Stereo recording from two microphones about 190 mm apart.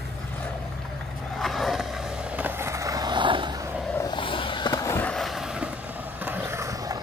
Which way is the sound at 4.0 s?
25° left (ahead or behind).